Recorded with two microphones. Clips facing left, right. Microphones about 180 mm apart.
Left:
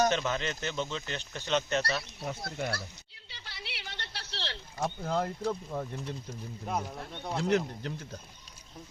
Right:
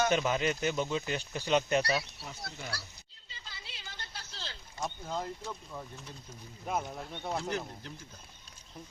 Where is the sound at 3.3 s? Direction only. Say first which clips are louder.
Left 5 dB; 75° left (ahead or behind).